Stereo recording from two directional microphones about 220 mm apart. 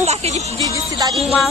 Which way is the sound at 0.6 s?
15° right (ahead or behind).